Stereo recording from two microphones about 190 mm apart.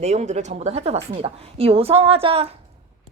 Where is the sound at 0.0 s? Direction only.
35° right (ahead or behind).